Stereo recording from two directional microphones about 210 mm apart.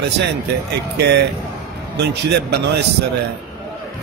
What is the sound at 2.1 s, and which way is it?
Speech, 55° right (ahead or behind).